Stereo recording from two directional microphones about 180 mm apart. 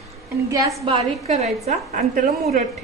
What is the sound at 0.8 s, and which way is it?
A woman's voice, 35° right (ahead or behind).